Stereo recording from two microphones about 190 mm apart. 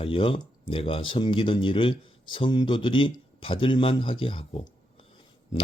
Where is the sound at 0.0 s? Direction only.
30° left (ahead or behind).